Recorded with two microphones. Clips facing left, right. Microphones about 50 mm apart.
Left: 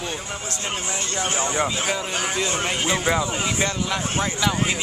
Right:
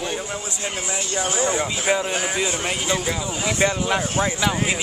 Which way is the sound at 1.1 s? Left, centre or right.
Left.